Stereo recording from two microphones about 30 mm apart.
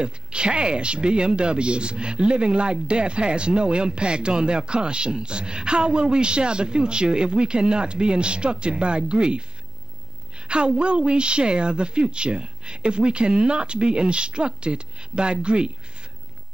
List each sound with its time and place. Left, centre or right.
0.0 s speech: right
10.5 s speech: right